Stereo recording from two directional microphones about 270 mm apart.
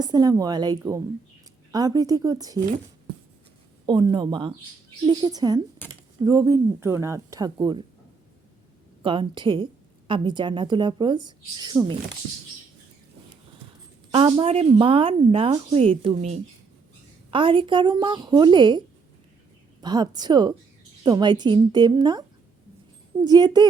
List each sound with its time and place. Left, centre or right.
0.0 s a woman's voice: centre
3.8 s a woman's voice: centre
9.0 s a woman's voice: centre
14.1 s a woman's voice: centre
19.8 s a woman's voice: centre
23.2 s a woman's voice: centre